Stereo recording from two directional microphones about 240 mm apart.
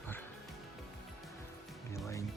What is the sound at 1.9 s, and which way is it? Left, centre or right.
Speech, centre.